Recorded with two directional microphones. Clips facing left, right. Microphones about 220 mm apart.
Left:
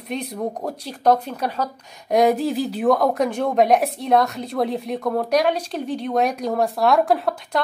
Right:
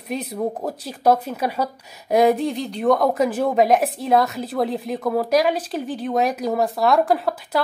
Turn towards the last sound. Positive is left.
turn(degrees=0)  # may be behind; listen again after turning